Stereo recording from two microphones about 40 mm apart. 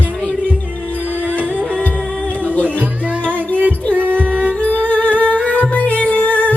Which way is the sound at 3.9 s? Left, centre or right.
Right.